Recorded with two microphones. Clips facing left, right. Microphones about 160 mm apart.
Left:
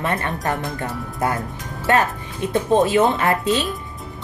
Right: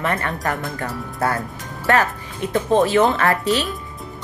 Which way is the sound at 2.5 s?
20° left (ahead or behind).